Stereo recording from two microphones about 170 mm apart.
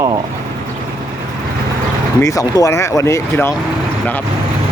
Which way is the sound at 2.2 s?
20° left (ahead or behind).